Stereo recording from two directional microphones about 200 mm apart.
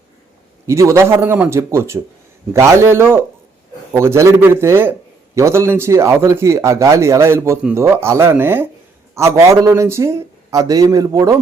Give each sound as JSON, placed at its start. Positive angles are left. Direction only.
{"t": 0.7, "sound": "a man's voice", "side_deg": -15}